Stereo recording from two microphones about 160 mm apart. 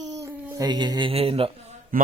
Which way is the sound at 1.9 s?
60° right (ahead or behind).